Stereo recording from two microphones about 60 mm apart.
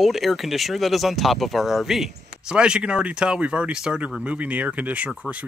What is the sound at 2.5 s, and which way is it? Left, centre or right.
Speech, centre.